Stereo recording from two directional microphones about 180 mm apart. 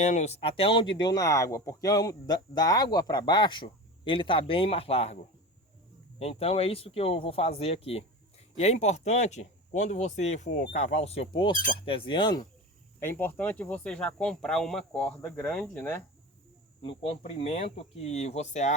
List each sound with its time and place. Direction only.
0.0 s speech: 40° left (ahead or behind); by 12.5 s 25° left (ahead or behind)
13.0 s speech: 10° left (ahead or behind)
16.8 s speech: 30° left (ahead or behind)